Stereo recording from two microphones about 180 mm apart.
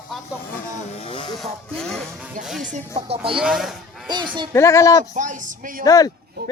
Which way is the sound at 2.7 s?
35° right (ahead or behind).